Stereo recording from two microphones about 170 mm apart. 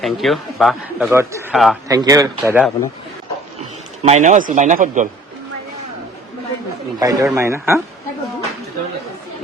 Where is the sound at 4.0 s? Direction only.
45° right (ahead or behind).